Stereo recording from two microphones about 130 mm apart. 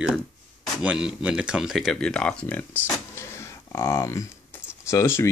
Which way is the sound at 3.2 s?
20° left (ahead or behind).